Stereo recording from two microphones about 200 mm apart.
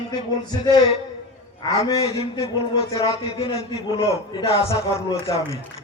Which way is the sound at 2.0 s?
30° left (ahead or behind).